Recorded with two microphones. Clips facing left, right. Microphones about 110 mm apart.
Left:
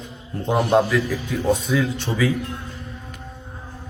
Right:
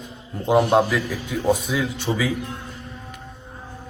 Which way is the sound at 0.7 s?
Centre (ahead or behind).